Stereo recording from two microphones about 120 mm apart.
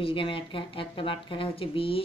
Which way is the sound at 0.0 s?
45° left (ahead or behind).